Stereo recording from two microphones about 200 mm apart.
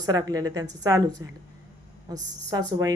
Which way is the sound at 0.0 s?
20° right (ahead or behind).